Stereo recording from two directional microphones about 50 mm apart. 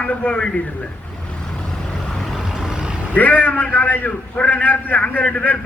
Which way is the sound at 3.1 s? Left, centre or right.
Left.